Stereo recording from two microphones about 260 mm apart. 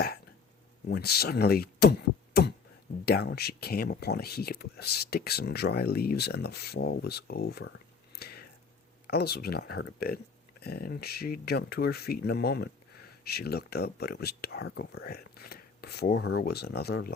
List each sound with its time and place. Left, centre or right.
0.9 s speech: left
8.1 s whispering: left
9.0 s speech: left